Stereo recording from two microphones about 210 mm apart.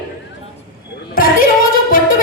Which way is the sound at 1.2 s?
45° left (ahead or behind).